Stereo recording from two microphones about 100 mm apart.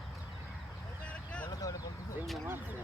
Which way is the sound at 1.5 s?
40° left (ahead or behind).